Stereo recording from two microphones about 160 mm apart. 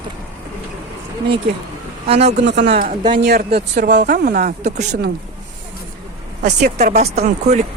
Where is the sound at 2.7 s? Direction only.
55° right (ahead or behind).